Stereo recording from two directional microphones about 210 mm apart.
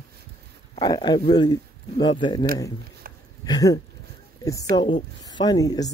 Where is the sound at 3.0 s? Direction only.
45° right (ahead or behind).